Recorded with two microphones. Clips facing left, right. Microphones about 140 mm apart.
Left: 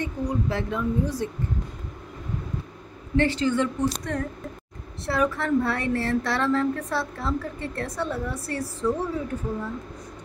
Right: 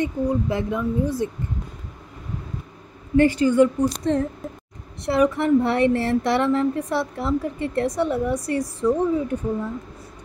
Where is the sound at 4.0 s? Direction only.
25° right (ahead or behind).